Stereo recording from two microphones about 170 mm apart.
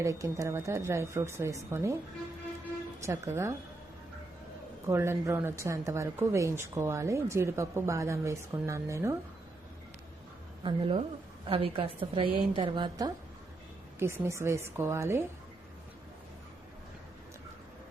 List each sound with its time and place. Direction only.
0.0 s a woman's voice: 20° right (ahead or behind)
3.0 s a woman's voice: 15° right (ahead or behind)
4.9 s a woman's voice: 15° right (ahead or behind)
10.6 s a woman's voice: 30° right (ahead or behind)